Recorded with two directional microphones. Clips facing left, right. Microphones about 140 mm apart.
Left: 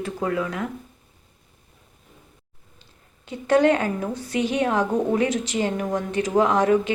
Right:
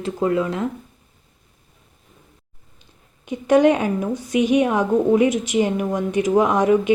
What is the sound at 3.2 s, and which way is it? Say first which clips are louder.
Speech: right 3 dB; 15° right (ahead or behind).